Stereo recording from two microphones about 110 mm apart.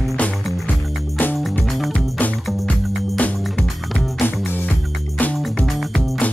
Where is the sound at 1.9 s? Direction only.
15° left (ahead or behind).